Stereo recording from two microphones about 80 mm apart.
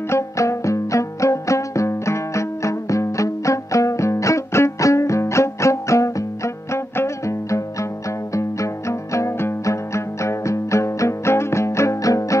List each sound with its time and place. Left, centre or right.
0.1 s music: left